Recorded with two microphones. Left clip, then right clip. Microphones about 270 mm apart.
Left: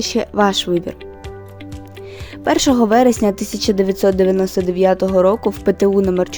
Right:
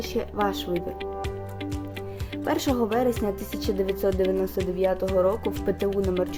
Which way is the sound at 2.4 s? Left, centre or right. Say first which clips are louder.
Left 11 dB; left.